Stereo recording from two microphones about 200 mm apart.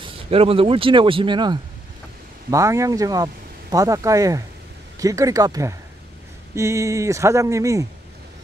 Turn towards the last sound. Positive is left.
turn(degrees=-15)  # may be behind; listen again after turning